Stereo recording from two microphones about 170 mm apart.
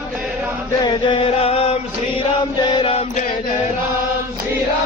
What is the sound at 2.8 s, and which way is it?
Music, 35° left (ahead or behind).